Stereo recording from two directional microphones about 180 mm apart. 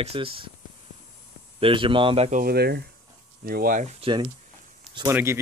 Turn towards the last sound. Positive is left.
turn(degrees=-15)  # may be behind; listen again after turning